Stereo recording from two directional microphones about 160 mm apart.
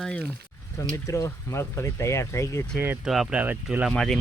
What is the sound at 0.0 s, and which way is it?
Speech, 5° left (ahead or behind).